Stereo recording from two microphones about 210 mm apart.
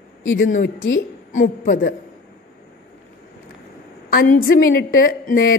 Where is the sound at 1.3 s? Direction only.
40° left (ahead or behind).